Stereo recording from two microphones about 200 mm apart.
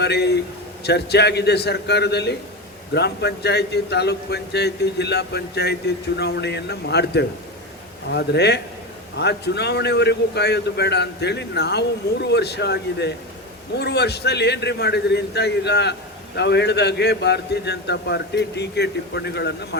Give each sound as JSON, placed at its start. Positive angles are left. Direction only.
{"t": 0.0, "sound": "a man's voice", "side_deg": 55}